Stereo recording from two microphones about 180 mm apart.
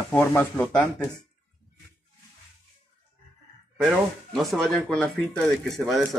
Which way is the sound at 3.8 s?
Centre (ahead or behind).